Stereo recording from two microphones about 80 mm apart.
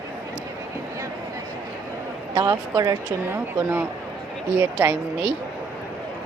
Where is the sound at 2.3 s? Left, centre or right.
Right.